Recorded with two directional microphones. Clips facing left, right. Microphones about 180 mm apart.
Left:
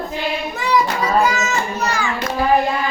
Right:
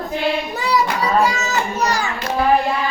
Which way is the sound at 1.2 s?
35° right (ahead or behind).